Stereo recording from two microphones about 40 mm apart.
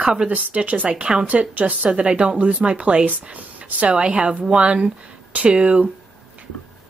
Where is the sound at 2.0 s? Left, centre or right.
Right.